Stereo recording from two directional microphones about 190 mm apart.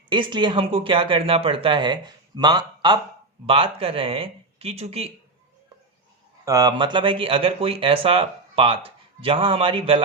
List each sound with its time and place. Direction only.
0.1 s speech: 25° right (ahead or behind)
6.4 s speech: 20° right (ahead or behind)